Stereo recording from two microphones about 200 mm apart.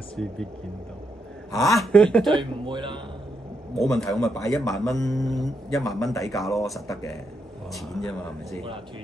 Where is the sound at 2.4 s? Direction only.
25° right (ahead or behind).